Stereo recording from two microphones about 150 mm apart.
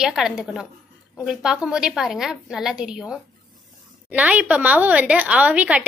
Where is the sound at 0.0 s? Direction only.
5° right (ahead or behind).